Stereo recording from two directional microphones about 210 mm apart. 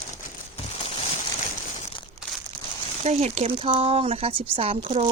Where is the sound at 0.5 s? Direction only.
30° left (ahead or behind).